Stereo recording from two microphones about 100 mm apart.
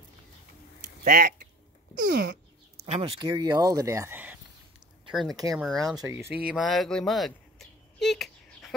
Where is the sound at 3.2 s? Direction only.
45° right (ahead or behind); by 4.2 s 30° right (ahead or behind).